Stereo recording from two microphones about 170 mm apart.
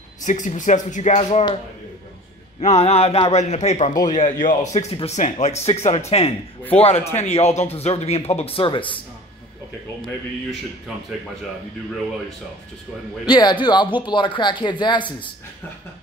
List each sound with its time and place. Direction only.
0.2 s speech: 45° left (ahead or behind)
2.6 s speech: 40° left (ahead or behind)
13.3 s speech: 25° left (ahead or behind)